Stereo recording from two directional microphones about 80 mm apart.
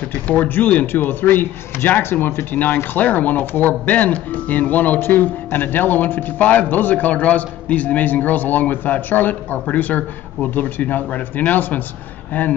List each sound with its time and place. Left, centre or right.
0.3 s a man's voice: centre